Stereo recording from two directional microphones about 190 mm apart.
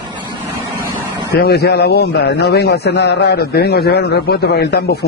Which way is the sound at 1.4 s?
60° left (ahead or behind).